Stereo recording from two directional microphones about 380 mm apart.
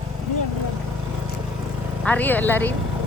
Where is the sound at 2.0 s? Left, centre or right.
Centre.